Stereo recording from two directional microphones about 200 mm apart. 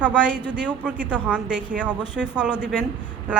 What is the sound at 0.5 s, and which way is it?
Speech, 5° right (ahead or behind).